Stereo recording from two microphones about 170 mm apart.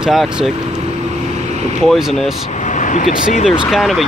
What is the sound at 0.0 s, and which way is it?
Speech, centre (ahead or behind).